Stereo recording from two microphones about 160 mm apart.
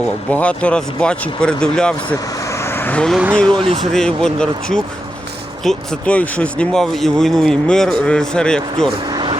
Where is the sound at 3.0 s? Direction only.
5° left (ahead or behind).